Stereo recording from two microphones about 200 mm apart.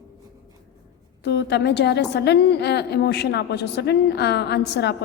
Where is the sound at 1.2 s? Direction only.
55° left (ahead or behind).